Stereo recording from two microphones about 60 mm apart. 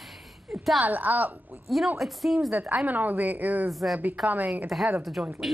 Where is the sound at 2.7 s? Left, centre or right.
Right.